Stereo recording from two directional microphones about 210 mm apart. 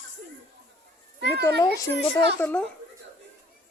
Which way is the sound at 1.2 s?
55° right (ahead or behind).